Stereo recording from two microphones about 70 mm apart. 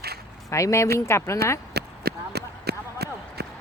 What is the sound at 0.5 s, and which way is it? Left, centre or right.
Speech, left.